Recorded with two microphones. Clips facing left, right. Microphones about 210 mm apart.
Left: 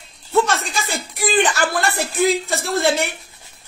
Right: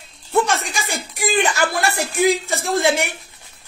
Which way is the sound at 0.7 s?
15° right (ahead or behind).